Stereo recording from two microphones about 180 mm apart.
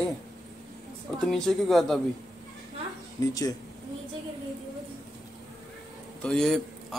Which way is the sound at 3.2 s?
20° left (ahead or behind).